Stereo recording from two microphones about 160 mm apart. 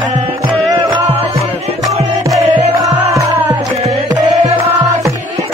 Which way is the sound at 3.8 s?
45° right (ahead or behind).